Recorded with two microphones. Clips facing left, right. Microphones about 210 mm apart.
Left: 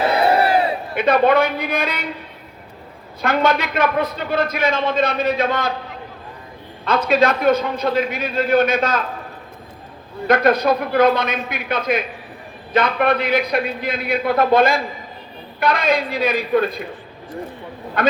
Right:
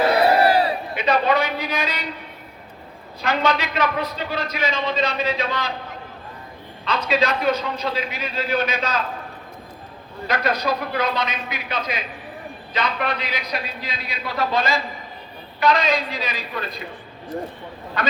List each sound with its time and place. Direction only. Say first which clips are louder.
0.0 s battle cry: even; 25° left (ahead or behind)
0.9 s a man's voice: left 5 dB; 55° left (ahead or behind)
3.2 s a man's voice: left 4 dB; 50° left (ahead or behind)
6.8 s a man's voice: left 5 dB; 50° left (ahead or behind)
10.2 s a man's voice: left 7 dB; 55° left (ahead or behind)
18.0 s a man's voice: left 7 dB; 55° left (ahead or behind)